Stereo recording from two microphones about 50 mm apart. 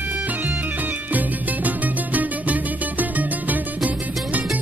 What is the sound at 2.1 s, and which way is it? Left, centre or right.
Music, right.